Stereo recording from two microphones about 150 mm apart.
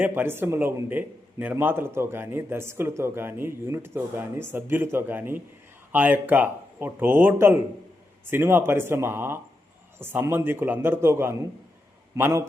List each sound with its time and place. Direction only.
0.0 s a man's voice: 15° right (ahead or behind)